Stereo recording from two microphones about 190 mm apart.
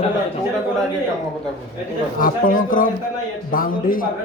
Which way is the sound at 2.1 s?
45° left (ahead or behind).